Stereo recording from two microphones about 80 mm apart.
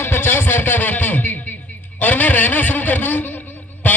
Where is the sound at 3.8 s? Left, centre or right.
Left.